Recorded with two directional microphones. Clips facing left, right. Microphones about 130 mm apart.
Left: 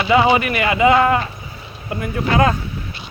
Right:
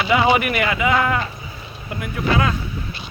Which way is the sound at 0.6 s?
25° left (ahead or behind).